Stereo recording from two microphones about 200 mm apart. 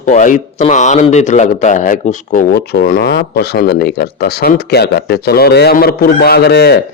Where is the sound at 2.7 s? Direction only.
50° left (ahead or behind).